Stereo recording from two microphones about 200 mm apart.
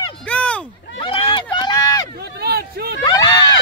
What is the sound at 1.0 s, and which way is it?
Run, 25° left (ahead or behind).